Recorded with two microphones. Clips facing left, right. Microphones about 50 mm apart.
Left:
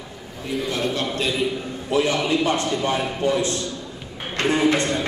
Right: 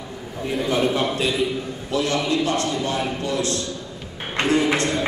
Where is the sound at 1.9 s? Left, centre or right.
Centre.